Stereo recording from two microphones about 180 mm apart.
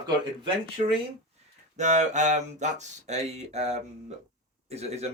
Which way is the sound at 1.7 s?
40° right (ahead or behind).